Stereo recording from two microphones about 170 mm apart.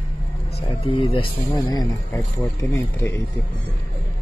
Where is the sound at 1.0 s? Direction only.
30° left (ahead or behind); by 3.2 s 15° left (ahead or behind).